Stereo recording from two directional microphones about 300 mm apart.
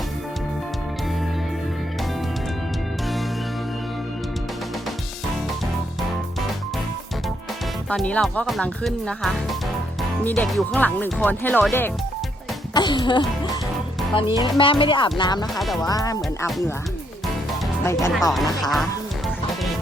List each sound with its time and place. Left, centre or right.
7.9 s speech: centre
12.7 s music: centre
14.2 s speech: centre
15.5 s speech: centre
15.8 s speech: centre
16.5 s speech: centre
17.8 s speech: centre